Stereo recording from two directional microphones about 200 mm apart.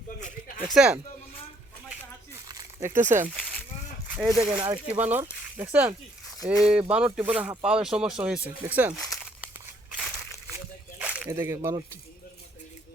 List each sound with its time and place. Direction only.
0.2 s a sound: 40° left (ahead or behind)
0.7 s speech: 5° right (ahead or behind)
2.5 s a sound: 15° right (ahead or behind)
3.0 s speech: 35° right (ahead or behind)
3.2 s a sound: centre (ahead or behind)
4.1 s speech: 5° right (ahead or behind)
4.5 s speech: 25° right (ahead or behind)
4.9 s speech: 10° right (ahead or behind)
9.0 s crumpling: centre (ahead or behind)
9.9 s crushing: 5° right (ahead or behind)
11.0 s speech: 5° right (ahead or behind)